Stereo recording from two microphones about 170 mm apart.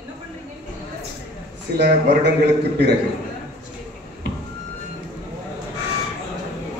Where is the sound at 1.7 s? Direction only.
75° right (ahead or behind).